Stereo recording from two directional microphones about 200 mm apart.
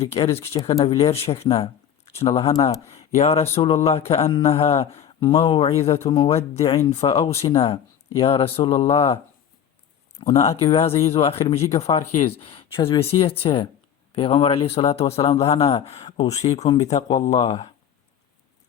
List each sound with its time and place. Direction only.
0.0 s speech: 30° left (ahead or behind)
10.2 s speech: 30° left (ahead or behind)